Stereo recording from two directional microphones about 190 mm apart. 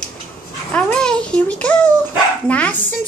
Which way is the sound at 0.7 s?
5° left (ahead or behind).